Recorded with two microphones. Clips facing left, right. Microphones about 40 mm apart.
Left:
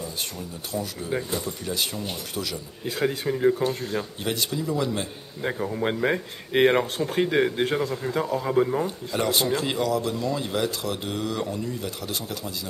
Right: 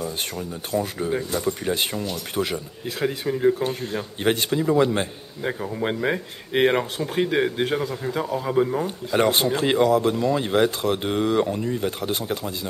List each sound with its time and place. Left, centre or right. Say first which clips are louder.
0.7 s speech: right 5 dB; right
2.8 s speech: left 1 dB; centre
4.2 s speech: right 6 dB; right
5.4 s speech: even; centre
8.8 s speech: right 5 dB; right